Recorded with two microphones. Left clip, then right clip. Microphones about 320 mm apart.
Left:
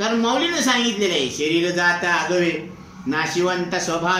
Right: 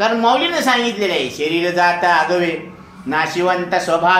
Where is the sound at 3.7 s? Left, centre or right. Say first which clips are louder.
Right 7 dB; centre.